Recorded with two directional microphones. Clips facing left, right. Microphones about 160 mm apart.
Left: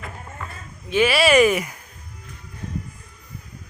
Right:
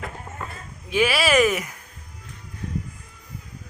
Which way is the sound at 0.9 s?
5° right (ahead or behind).